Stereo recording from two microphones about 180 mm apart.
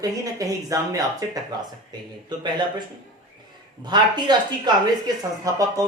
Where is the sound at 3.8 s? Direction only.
25° right (ahead or behind).